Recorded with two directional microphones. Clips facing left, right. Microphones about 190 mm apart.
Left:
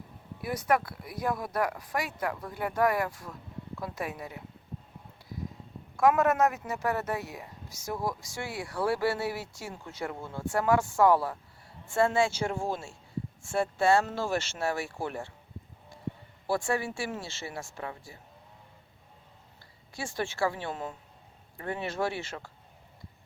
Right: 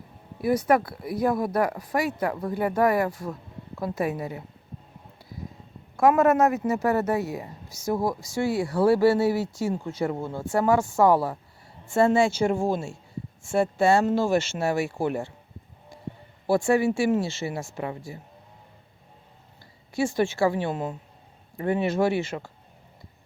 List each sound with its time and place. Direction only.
0.4 s speech: 30° right (ahead or behind)
6.0 s speech: 35° right (ahead or behind)
10.5 s speech: 25° right (ahead or behind)
16.5 s speech: 20° right (ahead or behind)
19.9 s speech: 20° right (ahead or behind)